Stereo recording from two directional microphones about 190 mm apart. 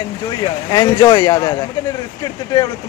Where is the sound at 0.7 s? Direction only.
20° left (ahead or behind).